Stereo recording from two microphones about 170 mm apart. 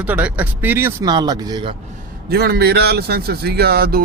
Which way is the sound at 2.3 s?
65° right (ahead or behind).